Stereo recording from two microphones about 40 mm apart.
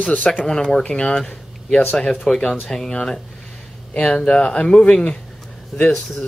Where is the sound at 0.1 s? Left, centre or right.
Left.